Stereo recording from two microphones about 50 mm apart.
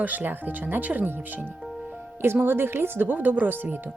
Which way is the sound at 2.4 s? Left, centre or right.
Right.